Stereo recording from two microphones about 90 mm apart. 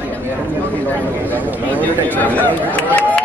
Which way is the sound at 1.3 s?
20° left (ahead or behind).